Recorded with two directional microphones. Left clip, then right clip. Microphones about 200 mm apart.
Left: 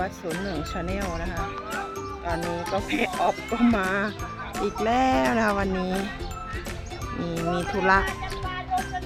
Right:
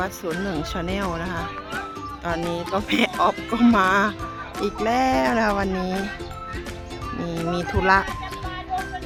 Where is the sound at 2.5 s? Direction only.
40° right (ahead or behind).